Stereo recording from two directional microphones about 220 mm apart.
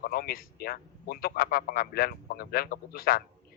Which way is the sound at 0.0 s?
45° left (ahead or behind).